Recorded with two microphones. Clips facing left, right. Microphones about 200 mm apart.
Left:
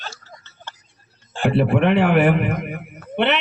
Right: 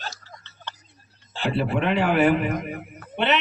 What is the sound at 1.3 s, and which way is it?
A man's voice, 55° left (ahead or behind).